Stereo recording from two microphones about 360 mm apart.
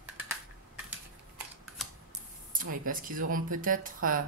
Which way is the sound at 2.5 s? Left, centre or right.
Right.